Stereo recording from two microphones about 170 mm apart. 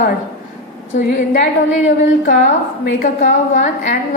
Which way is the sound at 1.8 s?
50° left (ahead or behind).